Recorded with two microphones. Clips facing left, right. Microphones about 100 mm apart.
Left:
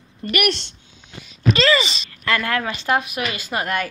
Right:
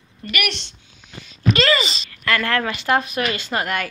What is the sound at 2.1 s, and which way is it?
Speech, 20° left (ahead or behind).